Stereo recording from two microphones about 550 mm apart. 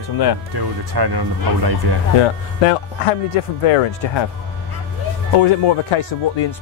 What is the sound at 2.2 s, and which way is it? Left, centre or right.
Speech, left.